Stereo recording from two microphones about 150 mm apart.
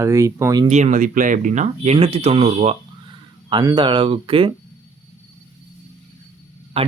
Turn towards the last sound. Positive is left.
turn(degrees=-45)  # may be behind; listen again after turning